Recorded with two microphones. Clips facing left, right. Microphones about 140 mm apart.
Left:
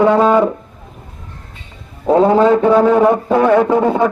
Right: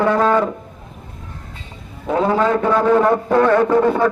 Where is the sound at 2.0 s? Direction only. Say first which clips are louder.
Left 7 dB; 30° left (ahead or behind).